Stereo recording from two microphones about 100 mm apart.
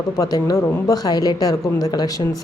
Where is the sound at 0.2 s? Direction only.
40° left (ahead or behind).